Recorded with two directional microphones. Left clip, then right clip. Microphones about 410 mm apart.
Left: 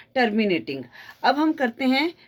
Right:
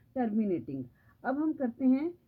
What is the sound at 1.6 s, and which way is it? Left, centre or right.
Speech, centre.